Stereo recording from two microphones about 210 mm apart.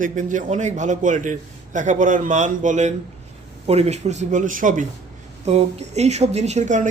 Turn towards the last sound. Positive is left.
turn(degrees=-35)  # may be behind; listen again after turning